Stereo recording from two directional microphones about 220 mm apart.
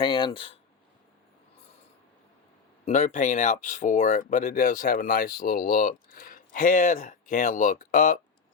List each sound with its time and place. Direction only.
0.0 s speech: 20° left (ahead or behind)
2.8 s speech: 35° left (ahead or behind)